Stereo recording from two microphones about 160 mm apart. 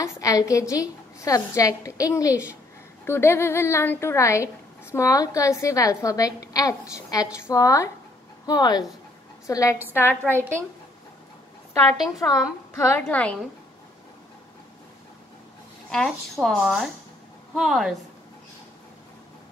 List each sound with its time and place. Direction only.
0.0 s a woman's voice: 20° left (ahead or behind)
12.2 s a woman's voice: 15° left (ahead or behind)
15.9 s speech: 5° left (ahead or behind)